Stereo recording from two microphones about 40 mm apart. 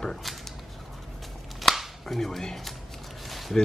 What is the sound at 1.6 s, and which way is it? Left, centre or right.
Finger snapping, centre.